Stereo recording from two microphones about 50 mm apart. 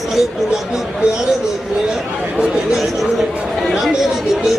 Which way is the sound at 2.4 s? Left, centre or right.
Centre.